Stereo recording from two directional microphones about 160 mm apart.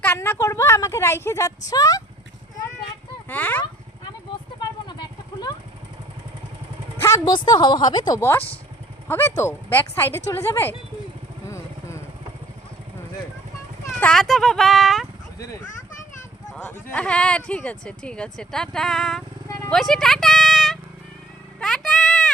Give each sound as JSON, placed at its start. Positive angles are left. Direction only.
{"t": 0.0, "sound": "a woman's voice", "side_deg": 15}
{"t": 3.2, "sound": "a woman's voice", "side_deg": 10}
{"t": 4.9, "sound": "vehicle", "side_deg": 25}
{"t": 7.0, "sound": "a woman's voice", "side_deg": 25}
{"t": 11.4, "sound": "vehicle", "side_deg": 15}
{"t": 14.0, "sound": "speech", "side_deg": 5}
{"t": 16.9, "sound": "speech", "side_deg": 5}
{"t": 19.5, "sound": "a sound", "side_deg": 20}
{"t": 19.7, "sound": "speech", "side_deg": 0}
{"t": 21.6, "sound": "a sound", "side_deg": 0}